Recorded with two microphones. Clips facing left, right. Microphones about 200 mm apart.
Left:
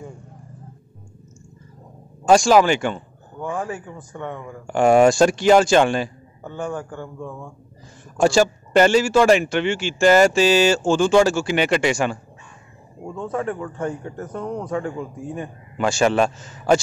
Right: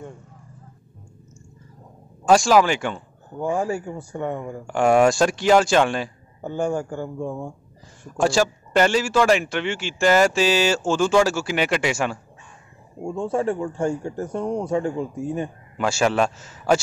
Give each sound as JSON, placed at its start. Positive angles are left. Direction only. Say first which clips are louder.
{"t": 2.2, "sound": "speech", "louder": "left 2 dB", "side_deg": 0}
{"t": 4.6, "sound": "a man's voice", "louder": "left 3 dB", "side_deg": 0}
{"t": 7.2, "sound": "speech", "louder": "right 5 dB", "side_deg": -25}
{"t": 8.2, "sound": "a man's voice", "louder": "left 3 dB", "side_deg": 0}
{"t": 13.0, "sound": "speech", "louder": "right 3 dB", "side_deg": -25}
{"t": 15.8, "sound": "a man's voice", "louder": "left 2 dB", "side_deg": -5}